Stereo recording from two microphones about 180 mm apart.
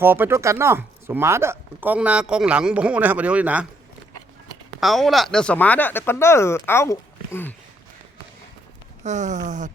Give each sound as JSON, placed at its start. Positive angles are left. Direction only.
{"t": 0.0, "sound": "speech", "side_deg": -10}
{"t": 4.8, "sound": "speech", "side_deg": 0}
{"t": 9.0, "sound": "speech", "side_deg": -40}